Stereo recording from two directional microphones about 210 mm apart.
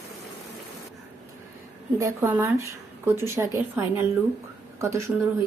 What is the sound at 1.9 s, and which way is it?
Speech, 10° right (ahead or behind).